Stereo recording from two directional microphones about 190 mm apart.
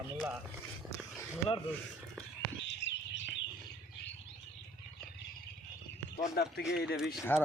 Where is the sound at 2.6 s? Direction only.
70° left (ahead or behind).